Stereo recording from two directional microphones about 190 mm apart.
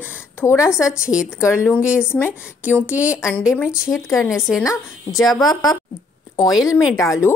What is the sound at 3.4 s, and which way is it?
A woman's voice, 10° left (ahead or behind).